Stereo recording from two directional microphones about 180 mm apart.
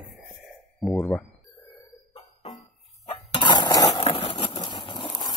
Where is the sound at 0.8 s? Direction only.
Centre (ahead or behind).